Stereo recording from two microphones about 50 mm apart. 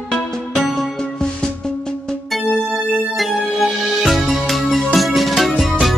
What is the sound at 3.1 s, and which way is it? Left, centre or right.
Music, centre.